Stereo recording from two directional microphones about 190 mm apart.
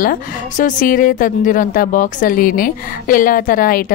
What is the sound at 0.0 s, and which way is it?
A woman's voice, 45° left (ahead or behind).